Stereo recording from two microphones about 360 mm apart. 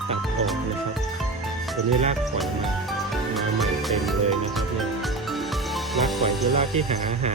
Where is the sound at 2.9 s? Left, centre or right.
Centre.